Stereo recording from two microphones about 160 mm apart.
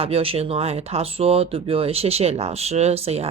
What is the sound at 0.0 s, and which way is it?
Speech, 35° right (ahead or behind).